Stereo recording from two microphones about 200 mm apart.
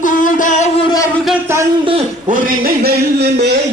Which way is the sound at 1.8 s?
30° right (ahead or behind).